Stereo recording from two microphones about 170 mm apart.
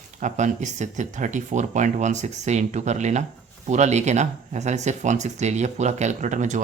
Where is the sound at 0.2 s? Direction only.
45° right (ahead or behind).